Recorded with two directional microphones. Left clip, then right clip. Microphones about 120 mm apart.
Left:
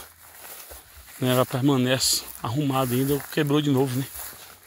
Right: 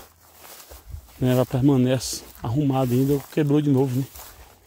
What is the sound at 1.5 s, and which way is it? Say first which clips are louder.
Speech: right 2 dB; 60° right (ahead or behind).